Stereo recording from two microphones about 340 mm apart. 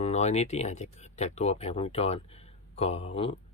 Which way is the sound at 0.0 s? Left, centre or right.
Centre.